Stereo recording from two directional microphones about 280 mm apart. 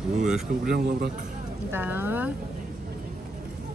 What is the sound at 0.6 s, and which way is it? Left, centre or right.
Speech, right.